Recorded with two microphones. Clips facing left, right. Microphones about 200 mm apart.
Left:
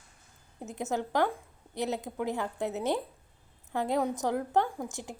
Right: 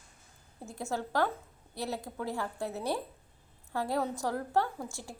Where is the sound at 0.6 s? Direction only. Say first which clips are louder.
Left 3 dB; 20° left (ahead or behind).